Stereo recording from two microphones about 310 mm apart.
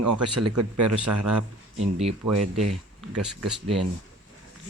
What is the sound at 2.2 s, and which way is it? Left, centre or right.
Speech, right.